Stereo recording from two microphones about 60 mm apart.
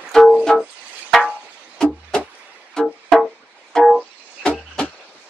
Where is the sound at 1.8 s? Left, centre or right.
Centre.